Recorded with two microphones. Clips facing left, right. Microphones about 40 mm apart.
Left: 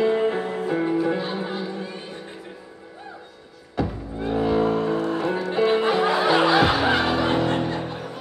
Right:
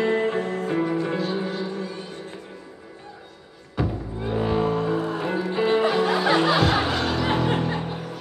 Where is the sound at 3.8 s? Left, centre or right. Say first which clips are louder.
Left 1 dB; centre.